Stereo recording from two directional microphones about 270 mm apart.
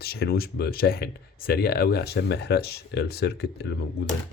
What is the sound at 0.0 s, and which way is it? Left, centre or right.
Speech, left.